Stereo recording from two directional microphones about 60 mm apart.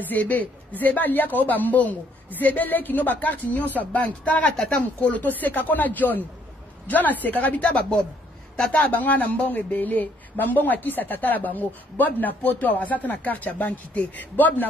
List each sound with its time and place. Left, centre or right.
0.0 s speech: left